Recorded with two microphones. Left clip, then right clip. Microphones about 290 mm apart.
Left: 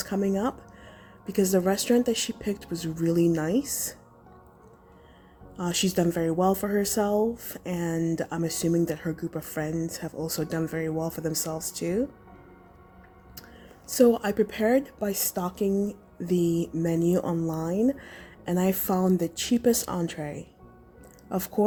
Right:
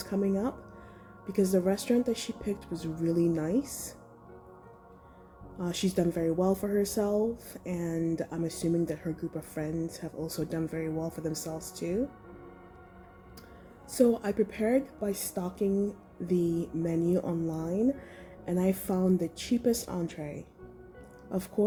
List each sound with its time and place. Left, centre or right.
0.0 s a woman's voice: left
5.5 s a woman's voice: left
13.8 s a woman's voice: left